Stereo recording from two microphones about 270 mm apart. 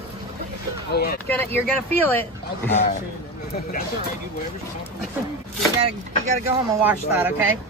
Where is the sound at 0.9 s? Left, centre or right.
Left.